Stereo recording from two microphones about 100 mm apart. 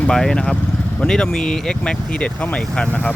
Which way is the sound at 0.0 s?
5° left (ahead or behind).